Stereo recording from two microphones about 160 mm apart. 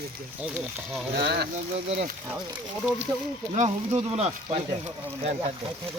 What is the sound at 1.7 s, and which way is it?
Speech, 50° right (ahead or behind).